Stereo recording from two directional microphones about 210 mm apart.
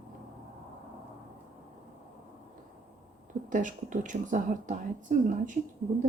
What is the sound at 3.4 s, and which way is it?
Speech, 40° right (ahead or behind).